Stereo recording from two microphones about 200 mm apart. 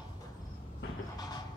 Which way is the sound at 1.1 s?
20° left (ahead or behind).